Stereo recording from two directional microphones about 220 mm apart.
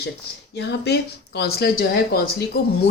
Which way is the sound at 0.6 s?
50° left (ahead or behind).